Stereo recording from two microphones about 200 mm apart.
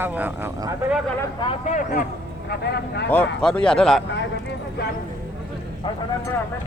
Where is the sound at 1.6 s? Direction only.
40° left (ahead or behind).